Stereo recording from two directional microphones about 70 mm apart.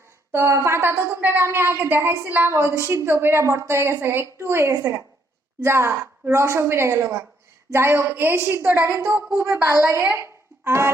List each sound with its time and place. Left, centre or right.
0.3 s a woman's voice: right